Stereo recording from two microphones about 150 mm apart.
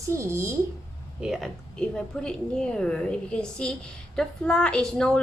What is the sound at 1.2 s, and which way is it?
A woman's voice, centre (ahead or behind).